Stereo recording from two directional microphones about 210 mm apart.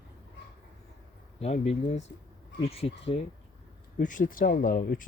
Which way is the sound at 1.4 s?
30° left (ahead or behind).